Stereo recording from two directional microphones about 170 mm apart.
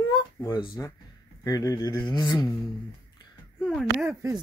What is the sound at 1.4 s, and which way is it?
Speech, 20° left (ahead or behind).